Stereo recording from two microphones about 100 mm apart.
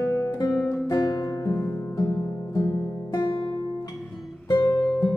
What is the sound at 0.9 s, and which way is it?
Music, 40° left (ahead or behind).